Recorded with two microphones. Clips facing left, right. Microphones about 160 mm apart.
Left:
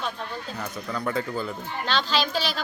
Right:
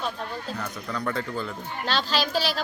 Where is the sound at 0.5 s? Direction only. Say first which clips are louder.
Even; 5° left (ahead or behind).